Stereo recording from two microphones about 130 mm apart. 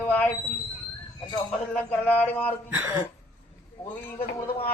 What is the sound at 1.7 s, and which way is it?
Speech, 15° left (ahead or behind).